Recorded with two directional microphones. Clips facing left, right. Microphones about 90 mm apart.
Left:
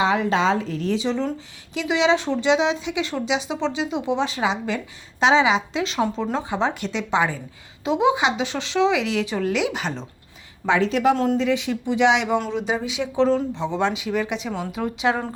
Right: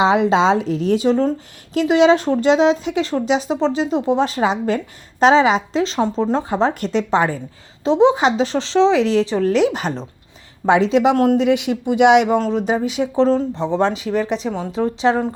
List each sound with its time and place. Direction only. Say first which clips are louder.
0.0 s speech: right 5 dB; 90° right
0.9 s speech: right 9 dB; 45° right (ahead or behind)
10.8 s speech: right 4 dB; 90° right; by 12.4 s 50° right (ahead or behind)
12.7 s speech: right 4 dB; 40° right (ahead or behind)
14.5 s a woman's voice: right 5 dB; 25° right (ahead or behind)